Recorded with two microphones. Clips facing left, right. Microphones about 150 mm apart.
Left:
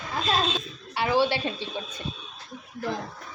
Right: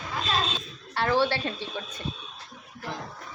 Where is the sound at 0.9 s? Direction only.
10° left (ahead or behind).